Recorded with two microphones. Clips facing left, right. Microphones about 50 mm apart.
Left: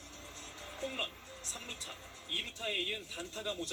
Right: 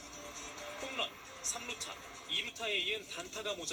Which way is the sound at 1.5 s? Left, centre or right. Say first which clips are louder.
Right 3 dB; right.